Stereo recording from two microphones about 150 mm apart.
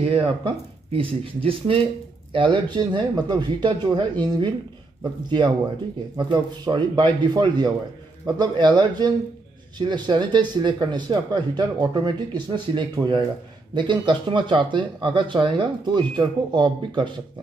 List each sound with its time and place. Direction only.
0.0 s speech: 40° right (ahead or behind)
6.1 s speech: 30° right (ahead or behind)